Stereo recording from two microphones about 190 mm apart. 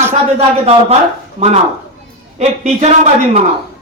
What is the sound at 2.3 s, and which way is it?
Speech, 35° right (ahead or behind).